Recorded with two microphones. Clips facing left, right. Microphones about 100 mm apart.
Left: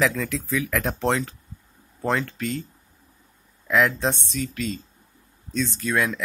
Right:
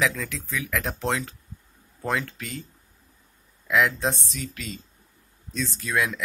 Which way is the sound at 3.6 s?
Centre (ahead or behind).